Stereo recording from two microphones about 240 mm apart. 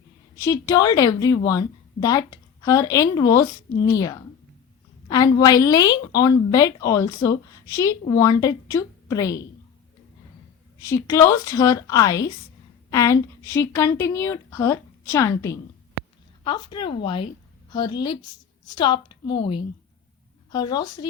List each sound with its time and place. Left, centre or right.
0.4 s a woman's voice: centre
10.8 s a woman's voice: centre